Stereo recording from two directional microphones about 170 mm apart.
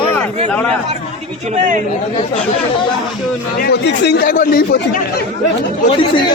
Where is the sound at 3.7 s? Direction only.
80° left; by 4.8 s 60° left (ahead or behind).